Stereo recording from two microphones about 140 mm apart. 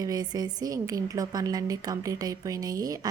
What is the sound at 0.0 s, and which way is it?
A woman's voice, 30° right (ahead or behind).